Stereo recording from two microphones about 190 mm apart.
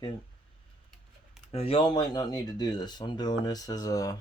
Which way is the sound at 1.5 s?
30° left (ahead or behind).